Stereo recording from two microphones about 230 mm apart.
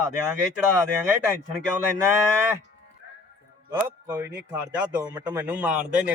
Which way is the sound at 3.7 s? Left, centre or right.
Centre.